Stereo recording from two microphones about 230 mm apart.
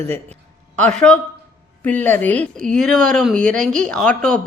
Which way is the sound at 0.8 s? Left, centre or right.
Centre.